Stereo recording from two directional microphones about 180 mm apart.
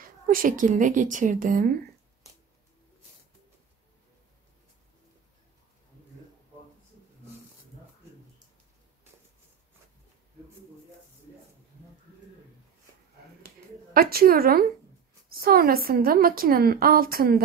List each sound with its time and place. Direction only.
0.3 s a woman's voice: 50° right (ahead or behind)
13.9 s a woman's voice: 55° right (ahead or behind)